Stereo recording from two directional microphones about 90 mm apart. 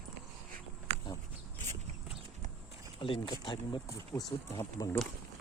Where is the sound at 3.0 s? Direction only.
70° left (ahead or behind).